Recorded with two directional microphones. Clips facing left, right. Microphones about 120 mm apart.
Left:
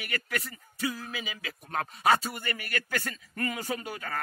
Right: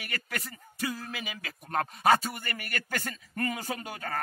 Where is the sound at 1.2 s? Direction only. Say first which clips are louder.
Even; 40° right (ahead or behind).